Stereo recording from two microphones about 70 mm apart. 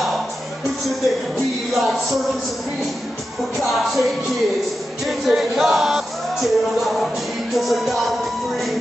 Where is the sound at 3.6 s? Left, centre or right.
Centre.